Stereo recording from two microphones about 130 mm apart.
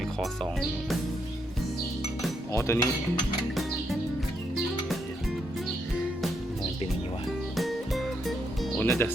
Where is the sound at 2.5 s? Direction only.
25° left (ahead or behind).